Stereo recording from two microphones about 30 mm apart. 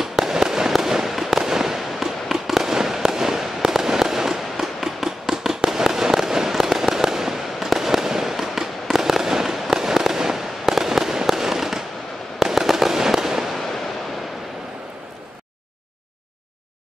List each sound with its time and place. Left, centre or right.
0.0 s fireworks: centre